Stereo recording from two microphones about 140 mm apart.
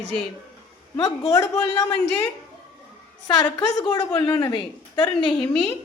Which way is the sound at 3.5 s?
35° left (ahead or behind).